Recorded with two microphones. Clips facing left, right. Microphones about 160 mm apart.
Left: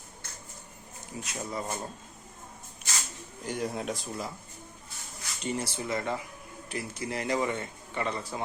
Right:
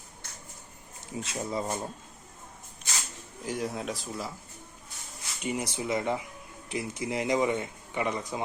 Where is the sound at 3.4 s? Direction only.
Centre (ahead or behind).